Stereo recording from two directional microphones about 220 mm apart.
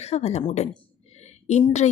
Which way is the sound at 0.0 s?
30° left (ahead or behind).